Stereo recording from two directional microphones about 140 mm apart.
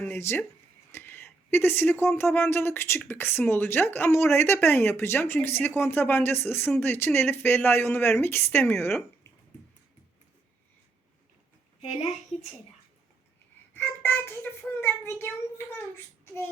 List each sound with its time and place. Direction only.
0.0 s speech: 15° left (ahead or behind)
13.7 s a child's voice: 15° left (ahead or behind)
16.2 s child singing: 15° left (ahead or behind)